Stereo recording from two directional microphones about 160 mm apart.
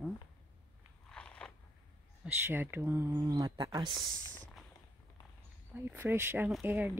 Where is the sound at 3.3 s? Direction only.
25° right (ahead or behind).